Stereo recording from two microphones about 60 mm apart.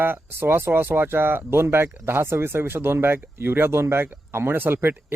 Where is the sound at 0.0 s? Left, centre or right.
Right.